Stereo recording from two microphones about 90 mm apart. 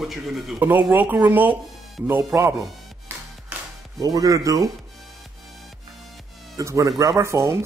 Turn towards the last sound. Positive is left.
turn(degrees=-30)  # may be behind; listen again after turning